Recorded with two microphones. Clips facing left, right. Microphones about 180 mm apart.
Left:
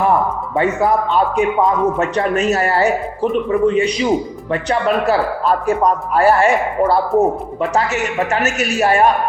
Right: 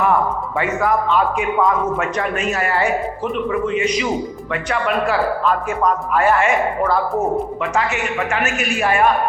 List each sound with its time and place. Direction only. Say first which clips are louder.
0.6 s speech: left 3 dB; 35° left (ahead or behind)